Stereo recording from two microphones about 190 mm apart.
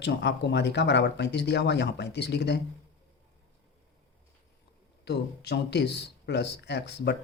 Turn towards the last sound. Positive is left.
turn(degrees=60)  # may be behind; listen again after turning